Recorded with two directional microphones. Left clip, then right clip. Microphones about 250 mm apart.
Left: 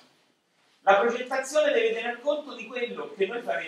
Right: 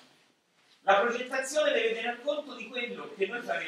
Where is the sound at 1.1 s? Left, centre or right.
Centre.